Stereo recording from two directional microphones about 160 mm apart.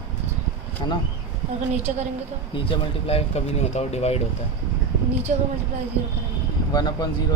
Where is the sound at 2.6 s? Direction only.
40° left (ahead or behind).